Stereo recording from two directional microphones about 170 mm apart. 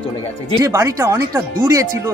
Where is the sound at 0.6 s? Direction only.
20° right (ahead or behind).